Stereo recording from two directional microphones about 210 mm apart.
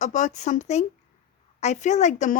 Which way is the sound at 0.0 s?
35° left (ahead or behind).